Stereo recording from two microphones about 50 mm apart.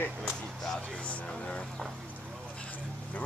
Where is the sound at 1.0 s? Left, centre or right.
Left.